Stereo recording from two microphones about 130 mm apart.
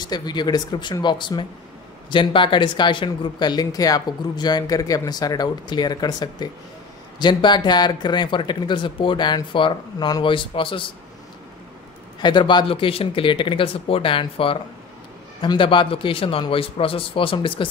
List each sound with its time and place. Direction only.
0.0 s speech: 35° left (ahead or behind)
12.2 s a man's voice: 35° left (ahead or behind)